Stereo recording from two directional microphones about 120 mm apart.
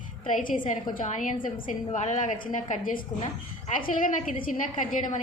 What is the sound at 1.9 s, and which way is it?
Speech, 70° left (ahead or behind).